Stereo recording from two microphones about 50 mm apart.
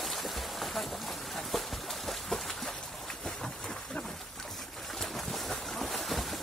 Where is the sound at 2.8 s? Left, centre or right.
Centre.